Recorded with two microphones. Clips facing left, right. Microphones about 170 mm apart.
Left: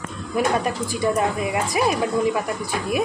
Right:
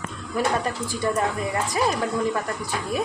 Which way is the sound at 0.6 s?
15° left (ahead or behind).